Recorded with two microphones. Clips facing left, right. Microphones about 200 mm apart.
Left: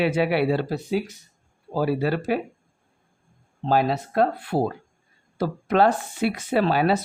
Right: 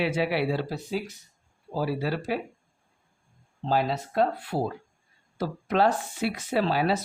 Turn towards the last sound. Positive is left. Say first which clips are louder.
# left 4 dB
turn(degrees=60)  # may be behind; listen again after turning